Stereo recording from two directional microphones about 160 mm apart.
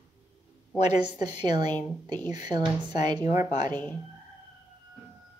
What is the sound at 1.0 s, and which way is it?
A woman's voice, 25° right (ahead or behind).